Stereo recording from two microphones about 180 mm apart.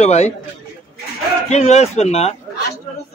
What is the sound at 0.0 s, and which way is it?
Speech, 35° left (ahead or behind).